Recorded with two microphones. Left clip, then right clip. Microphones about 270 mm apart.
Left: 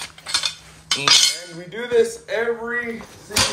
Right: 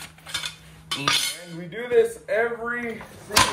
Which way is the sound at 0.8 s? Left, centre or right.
Left.